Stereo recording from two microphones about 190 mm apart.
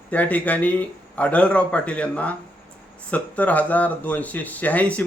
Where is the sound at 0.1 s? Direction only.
10° left (ahead or behind).